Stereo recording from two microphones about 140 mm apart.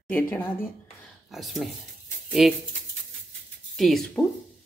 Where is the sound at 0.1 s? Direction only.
15° left (ahead or behind).